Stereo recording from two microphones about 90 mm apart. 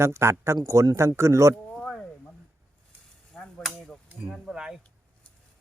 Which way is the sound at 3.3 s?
Centre (ahead or behind).